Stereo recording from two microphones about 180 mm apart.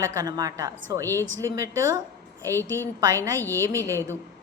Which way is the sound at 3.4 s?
10° left (ahead or behind).